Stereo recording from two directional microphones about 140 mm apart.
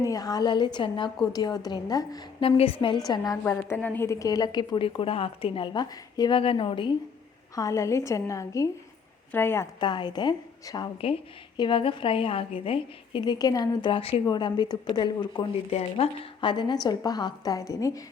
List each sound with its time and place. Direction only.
0.0 s a woman's voice: 25° left (ahead or behind)
2.4 s a woman's voice: 40° left (ahead or behind)
3.4 s a woman's voice: 15° left (ahead or behind); by 6.9 s 35° left (ahead or behind)
7.5 s a woman's voice: 25° left (ahead or behind)
9.8 s a woman's voice: 30° left (ahead or behind)
15.7 s speech: 50° left (ahead or behind)
16.4 s a woman's voice: 35° left (ahead or behind)